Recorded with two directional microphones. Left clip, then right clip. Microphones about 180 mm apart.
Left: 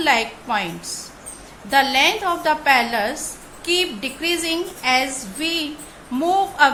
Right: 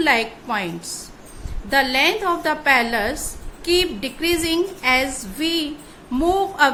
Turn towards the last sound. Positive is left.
turn(degrees=-20)  # may be behind; listen again after turning